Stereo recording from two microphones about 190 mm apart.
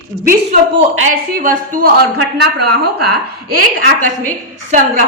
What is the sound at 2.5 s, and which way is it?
Speech, 60° right (ahead or behind).